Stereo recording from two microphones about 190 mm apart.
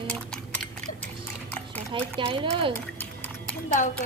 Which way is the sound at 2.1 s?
25° right (ahead or behind).